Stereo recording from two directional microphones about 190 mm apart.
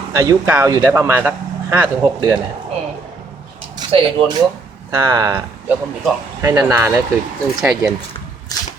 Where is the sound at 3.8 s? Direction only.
20° right (ahead or behind).